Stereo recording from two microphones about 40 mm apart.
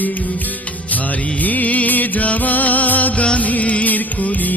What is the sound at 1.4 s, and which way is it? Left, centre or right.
Music, left.